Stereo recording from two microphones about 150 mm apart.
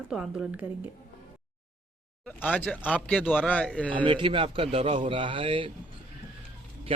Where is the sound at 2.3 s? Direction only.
10° left (ahead or behind).